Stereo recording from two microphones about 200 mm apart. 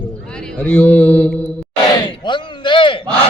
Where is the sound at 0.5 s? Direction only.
10° left (ahead or behind).